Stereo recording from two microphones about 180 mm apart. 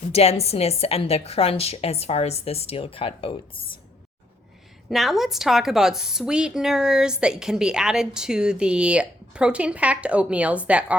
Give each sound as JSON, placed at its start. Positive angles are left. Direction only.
{"t": 0.1, "sound": "a woman's voice", "side_deg": 35}
{"t": 4.9, "sound": "a woman's voice", "side_deg": 0}